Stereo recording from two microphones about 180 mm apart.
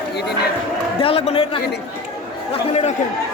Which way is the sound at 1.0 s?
35° left (ahead or behind).